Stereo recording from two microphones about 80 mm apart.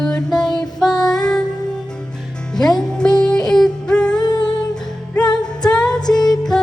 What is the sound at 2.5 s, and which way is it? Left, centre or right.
Music, centre.